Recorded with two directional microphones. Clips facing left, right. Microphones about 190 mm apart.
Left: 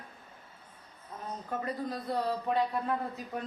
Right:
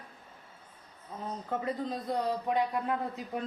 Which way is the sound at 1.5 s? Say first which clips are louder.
Right 1 dB; 20° right (ahead or behind).